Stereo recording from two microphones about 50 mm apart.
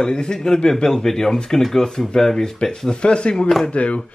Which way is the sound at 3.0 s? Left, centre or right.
Centre.